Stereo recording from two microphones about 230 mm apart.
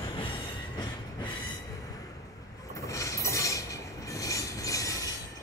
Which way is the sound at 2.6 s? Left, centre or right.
Centre.